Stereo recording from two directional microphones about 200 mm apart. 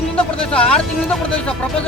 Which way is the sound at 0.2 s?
5° left (ahead or behind).